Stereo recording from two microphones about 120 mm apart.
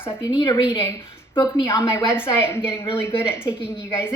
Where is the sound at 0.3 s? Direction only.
40° left (ahead or behind).